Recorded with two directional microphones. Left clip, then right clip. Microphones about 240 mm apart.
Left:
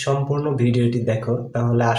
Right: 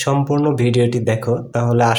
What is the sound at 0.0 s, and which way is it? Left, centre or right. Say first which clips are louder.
Speech: right 5 dB; right.